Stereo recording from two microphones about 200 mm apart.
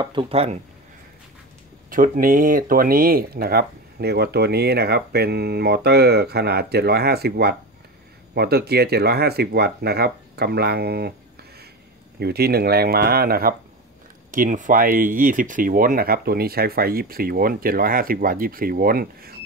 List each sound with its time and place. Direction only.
0.0 s speech: 25° right (ahead or behind)
1.9 s speech: 45° right (ahead or behind)
12.2 s speech: 50° right (ahead or behind)